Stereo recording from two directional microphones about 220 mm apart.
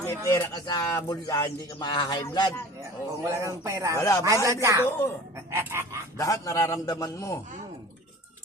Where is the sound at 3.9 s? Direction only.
15° left (ahead or behind).